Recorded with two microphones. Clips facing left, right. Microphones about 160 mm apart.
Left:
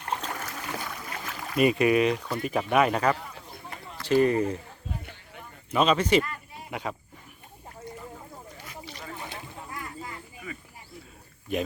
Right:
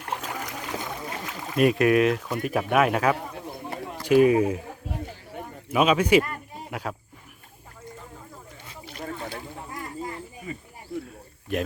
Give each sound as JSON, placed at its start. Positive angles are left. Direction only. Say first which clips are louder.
{"t": 0.0, "sound": "boat", "louder": "right 1 dB", "side_deg": -5}
{"t": 1.5, "sound": "speech", "louder": "right 2 dB", "side_deg": 0}
{"t": 5.7, "sound": "speech", "louder": "right 3 dB", "side_deg": -10}
{"t": 9.8, "sound": "a sound", "louder": "right 5 dB", "side_deg": -35}
{"t": 10.9, "sound": "cricket", "louder": "right 15 dB", "side_deg": -90}